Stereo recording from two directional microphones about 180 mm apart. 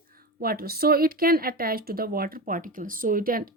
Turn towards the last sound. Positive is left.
turn(degrees=-55)  # may be behind; listen again after turning